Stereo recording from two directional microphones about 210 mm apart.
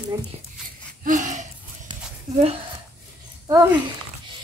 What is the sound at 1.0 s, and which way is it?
Gasp, 35° right (ahead or behind).